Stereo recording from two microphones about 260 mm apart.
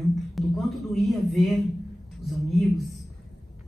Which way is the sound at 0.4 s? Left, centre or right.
Centre.